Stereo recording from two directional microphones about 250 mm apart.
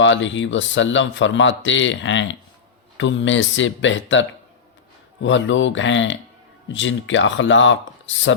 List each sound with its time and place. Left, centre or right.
0.0 s speech: left